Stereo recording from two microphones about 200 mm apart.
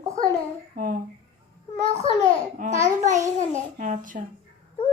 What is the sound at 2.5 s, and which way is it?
Speech, 40° right (ahead or behind).